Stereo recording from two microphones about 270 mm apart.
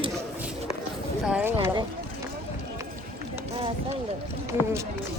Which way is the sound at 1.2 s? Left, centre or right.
Centre.